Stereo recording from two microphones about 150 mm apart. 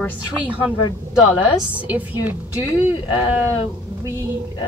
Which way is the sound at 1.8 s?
10° right (ahead or behind).